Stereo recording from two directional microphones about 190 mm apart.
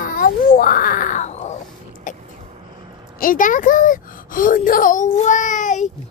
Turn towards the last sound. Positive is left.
turn(degrees=40)  # may be behind; listen again after turning